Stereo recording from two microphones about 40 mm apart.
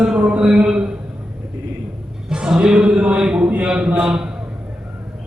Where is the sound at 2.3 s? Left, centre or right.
Centre.